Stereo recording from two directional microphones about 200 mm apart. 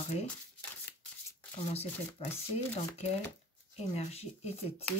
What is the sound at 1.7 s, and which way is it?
Speech, 30° left (ahead or behind).